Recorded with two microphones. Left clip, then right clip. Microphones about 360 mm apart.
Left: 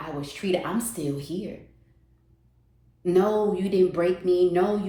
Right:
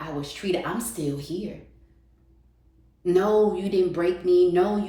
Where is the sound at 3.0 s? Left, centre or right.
Centre.